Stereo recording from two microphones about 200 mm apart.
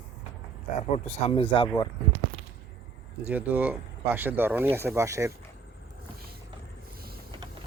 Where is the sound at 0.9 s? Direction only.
35° left (ahead or behind).